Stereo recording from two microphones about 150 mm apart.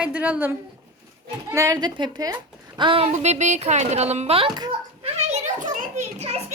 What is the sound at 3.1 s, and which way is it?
A woman's voice, 50° right (ahead or behind).